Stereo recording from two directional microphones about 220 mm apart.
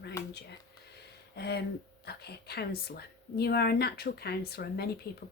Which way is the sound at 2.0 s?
45° left (ahead or behind).